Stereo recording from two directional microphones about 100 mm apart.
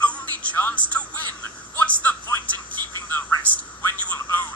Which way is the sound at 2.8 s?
40° right (ahead or behind).